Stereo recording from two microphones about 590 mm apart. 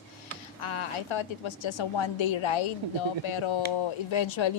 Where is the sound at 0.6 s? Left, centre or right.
Left.